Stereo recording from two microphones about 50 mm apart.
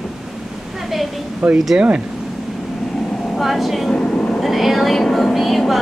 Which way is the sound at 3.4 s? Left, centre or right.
Centre.